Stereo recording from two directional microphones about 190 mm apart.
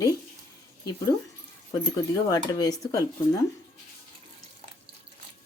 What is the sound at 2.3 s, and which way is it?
Speech, 20° left (ahead or behind).